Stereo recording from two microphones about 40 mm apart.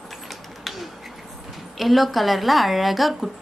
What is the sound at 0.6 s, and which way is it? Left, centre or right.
Bird, centre.